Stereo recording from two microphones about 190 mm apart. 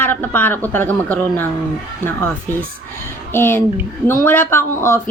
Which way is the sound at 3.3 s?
10° left (ahead or behind).